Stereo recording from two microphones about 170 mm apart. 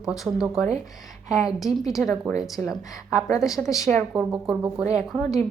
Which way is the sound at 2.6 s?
10° left (ahead or behind).